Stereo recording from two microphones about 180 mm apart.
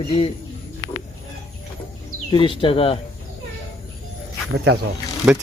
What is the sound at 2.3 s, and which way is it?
Speech, 30° left (ahead or behind).